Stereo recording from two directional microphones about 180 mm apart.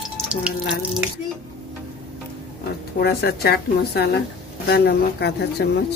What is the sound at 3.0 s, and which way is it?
A woman's voice, 60° left (ahead or behind).